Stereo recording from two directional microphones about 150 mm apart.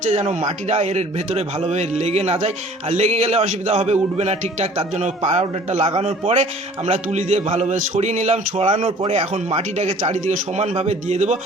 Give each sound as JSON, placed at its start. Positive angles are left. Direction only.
{"t": 0.1, "sound": "a man's voice", "side_deg": -45}